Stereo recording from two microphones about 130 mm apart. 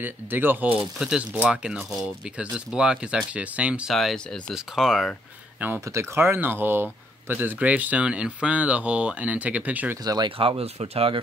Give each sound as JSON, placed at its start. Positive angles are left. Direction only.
{"t": 0.0, "sound": "speech", "side_deg": -15}
{"t": 3.9, "sound": "speech", "side_deg": 0}
{"t": 5.6, "sound": "speech", "side_deg": -20}
{"t": 10.0, "sound": "speech", "side_deg": -30}
{"t": 10.3, "sound": "speech", "side_deg": -45}